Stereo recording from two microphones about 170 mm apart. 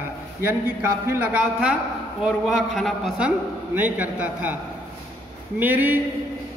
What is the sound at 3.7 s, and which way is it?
Speech, 10° right (ahead or behind).